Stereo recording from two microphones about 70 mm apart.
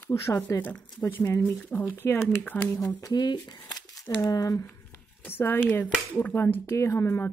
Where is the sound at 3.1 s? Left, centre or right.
Left.